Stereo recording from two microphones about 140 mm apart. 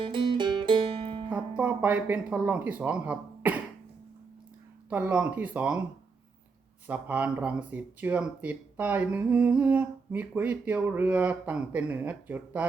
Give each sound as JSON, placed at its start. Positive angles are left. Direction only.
{"t": 0.0, "sound": "music", "side_deg": -35}
{"t": 1.3, "sound": "speech", "side_deg": -10}
{"t": 4.9, "sound": "speech", "side_deg": -10}
{"t": 6.8, "sound": "speech", "side_deg": -10}